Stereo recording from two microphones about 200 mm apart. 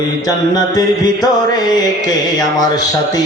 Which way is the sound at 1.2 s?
20° left (ahead or behind).